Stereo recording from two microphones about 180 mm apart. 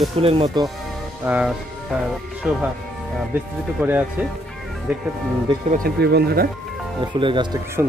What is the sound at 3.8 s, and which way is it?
Speech, 10° right (ahead or behind).